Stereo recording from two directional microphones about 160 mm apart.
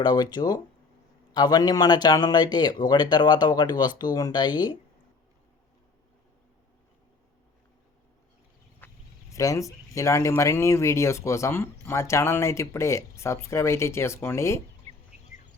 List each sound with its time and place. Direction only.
0.0 s speech: 25° left (ahead or behind)
8.8 s a sound: 10° left (ahead or behind)
9.3 s speech: 20° left (ahead or behind)